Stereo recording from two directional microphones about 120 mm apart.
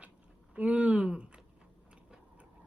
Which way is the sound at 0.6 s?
10° right (ahead or behind).